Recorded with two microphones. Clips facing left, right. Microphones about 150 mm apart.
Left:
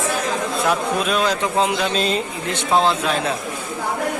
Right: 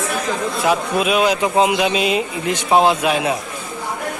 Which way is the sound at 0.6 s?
5° right (ahead or behind).